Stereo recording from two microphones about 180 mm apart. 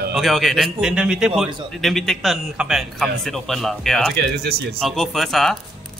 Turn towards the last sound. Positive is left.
turn(degrees=0)  # may be behind; listen again after turning